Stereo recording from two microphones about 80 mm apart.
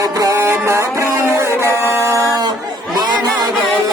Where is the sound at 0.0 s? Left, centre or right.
Right.